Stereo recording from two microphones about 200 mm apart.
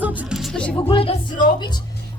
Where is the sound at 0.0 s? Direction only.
Centre (ahead or behind).